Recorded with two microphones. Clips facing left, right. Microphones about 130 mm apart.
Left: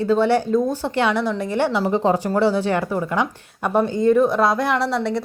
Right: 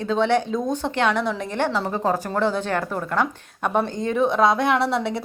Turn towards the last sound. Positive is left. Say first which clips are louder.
# left 1 dB
turn(degrees=0)  # may be behind; listen again after turning